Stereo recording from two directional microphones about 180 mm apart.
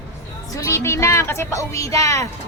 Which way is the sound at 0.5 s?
15° left (ahead or behind).